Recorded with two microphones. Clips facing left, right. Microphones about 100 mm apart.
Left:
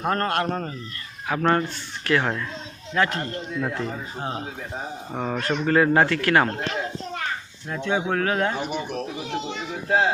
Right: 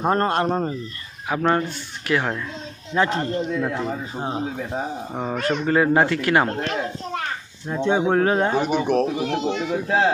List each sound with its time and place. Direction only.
0.0 s speech: 25° right (ahead or behind)
5.1 s speech: 5° right (ahead or behind)
7.7 s speech: 30° right (ahead or behind)
8.5 s a man's voice: 75° right (ahead or behind)
9.1 s speech: 55° right (ahead or behind)